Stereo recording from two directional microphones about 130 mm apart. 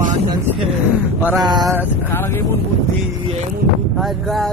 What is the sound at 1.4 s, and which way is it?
Speech, 30° right (ahead or behind).